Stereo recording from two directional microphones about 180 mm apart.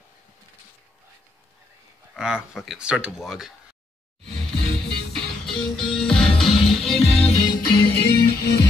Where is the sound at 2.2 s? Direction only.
5° right (ahead or behind).